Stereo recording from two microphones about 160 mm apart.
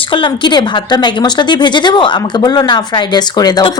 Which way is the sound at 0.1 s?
30° left (ahead or behind).